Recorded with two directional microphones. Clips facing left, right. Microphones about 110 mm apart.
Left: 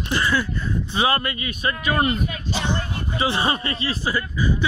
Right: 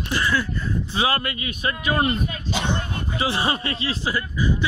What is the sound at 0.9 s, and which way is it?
A man's voice, 5° right (ahead or behind).